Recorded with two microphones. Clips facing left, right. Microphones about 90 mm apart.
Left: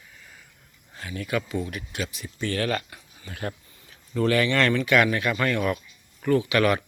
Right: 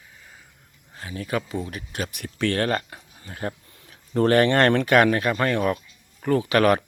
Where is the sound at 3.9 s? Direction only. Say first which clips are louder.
Right 4 dB; 50° right (ahead or behind).